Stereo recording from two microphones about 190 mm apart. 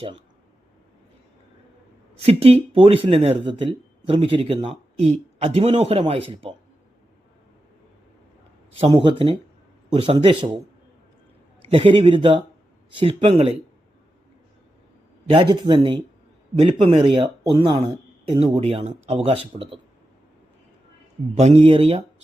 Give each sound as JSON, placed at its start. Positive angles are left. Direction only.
{"t": 2.2, "sound": "speech", "side_deg": -30}
{"t": 8.9, "sound": "speech", "side_deg": -25}
{"t": 11.7, "sound": "speech", "side_deg": -30}
{"t": 15.3, "sound": "speech", "side_deg": -25}
{"t": 21.3, "sound": "speech", "side_deg": -35}